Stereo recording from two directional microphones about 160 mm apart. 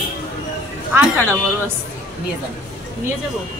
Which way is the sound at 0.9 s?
15° right (ahead or behind).